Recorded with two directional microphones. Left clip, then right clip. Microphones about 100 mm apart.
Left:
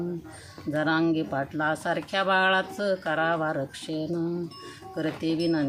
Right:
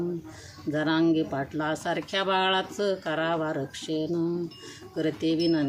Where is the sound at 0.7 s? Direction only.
35° left (ahead or behind).